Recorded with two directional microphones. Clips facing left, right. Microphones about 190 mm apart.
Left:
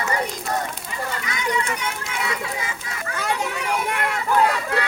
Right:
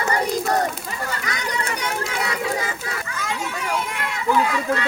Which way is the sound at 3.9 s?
55° left (ahead or behind).